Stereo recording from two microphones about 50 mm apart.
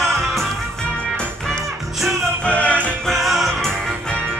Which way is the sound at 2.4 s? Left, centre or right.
Left.